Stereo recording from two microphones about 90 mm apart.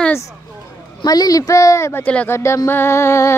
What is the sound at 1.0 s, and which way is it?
Speech, 45° left (ahead or behind).